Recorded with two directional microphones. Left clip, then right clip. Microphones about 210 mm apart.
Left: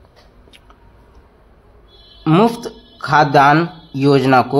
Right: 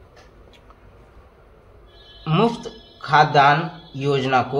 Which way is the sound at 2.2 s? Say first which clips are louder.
Left 6 dB; 40° left (ahead or behind).